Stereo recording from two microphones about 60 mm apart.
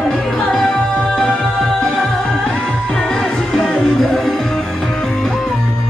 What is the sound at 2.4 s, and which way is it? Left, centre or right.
Music, centre.